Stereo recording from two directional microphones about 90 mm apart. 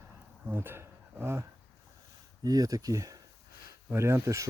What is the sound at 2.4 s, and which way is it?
Speech, 45° right (ahead or behind).